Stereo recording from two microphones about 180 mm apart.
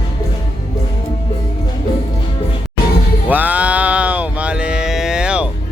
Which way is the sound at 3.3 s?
10° right (ahead or behind).